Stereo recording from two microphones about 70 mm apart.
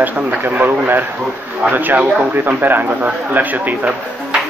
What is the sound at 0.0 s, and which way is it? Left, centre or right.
A man's voice, right.